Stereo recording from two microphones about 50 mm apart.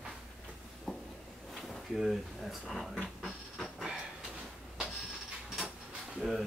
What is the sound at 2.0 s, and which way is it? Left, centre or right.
Speech, centre.